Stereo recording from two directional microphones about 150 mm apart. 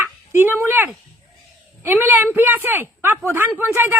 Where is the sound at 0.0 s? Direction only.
15° right (ahead or behind).